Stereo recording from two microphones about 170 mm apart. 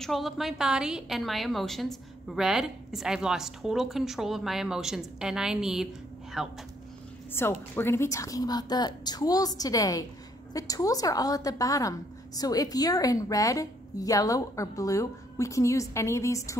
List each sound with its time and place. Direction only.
0.0 s a woman's voice: centre (ahead or behind)
7.4 s a woman's voice: 15° left (ahead or behind)